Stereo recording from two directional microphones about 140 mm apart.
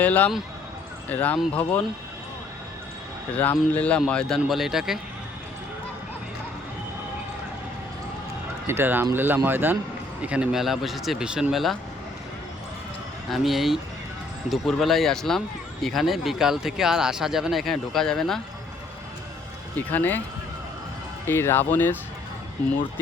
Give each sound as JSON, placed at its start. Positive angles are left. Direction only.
{"t": 0.0, "sound": "speech", "side_deg": 10}
{"t": 3.3, "sound": "speech", "side_deg": 10}
{"t": 8.6, "sound": "speech", "side_deg": -15}
{"t": 13.3, "sound": "speech", "side_deg": 0}
{"t": 19.9, "sound": "speech", "side_deg": 15}
{"t": 21.2, "sound": "speech", "side_deg": 15}